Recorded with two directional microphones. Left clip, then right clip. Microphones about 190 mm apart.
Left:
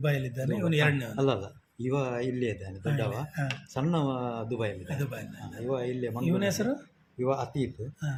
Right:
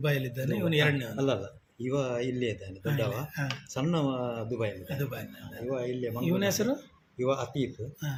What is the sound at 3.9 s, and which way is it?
Speech, 10° left (ahead or behind).